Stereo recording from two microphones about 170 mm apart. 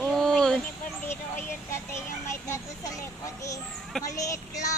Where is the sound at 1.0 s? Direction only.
15° left (ahead or behind).